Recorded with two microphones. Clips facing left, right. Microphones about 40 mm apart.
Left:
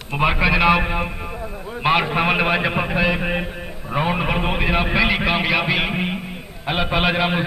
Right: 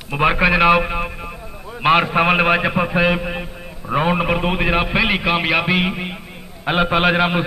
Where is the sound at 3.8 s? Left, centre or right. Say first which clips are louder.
Right 3 dB; centre.